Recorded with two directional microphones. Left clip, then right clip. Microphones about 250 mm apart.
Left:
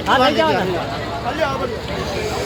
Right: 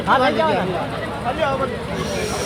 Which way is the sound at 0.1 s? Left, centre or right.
Left.